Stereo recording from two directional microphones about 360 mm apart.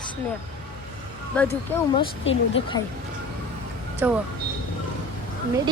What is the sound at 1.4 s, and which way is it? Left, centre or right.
Speech, centre.